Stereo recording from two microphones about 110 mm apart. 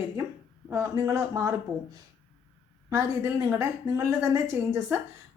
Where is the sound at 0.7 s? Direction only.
25° right (ahead or behind).